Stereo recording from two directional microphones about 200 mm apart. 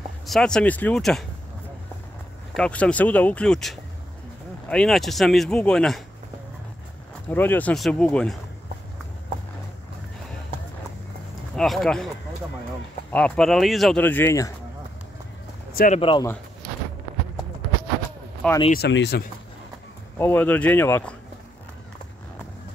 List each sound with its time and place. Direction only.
0.3 s speech: 5° left (ahead or behind)
2.5 s speech: 5° left (ahead or behind)
7.2 s speech: 10° left (ahead or behind)
11.5 s speech: centre (ahead or behind)
13.1 s speech: 5° left (ahead or behind)
15.7 s speech: 45° left (ahead or behind)
16.0 s speech: 25° left (ahead or behind)
18.7 s speech: 60° left (ahead or behind)
20.2 s speech: 10° left (ahead or behind)